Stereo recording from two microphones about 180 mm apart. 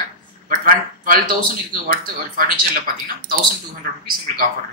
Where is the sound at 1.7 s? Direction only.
50° right (ahead or behind).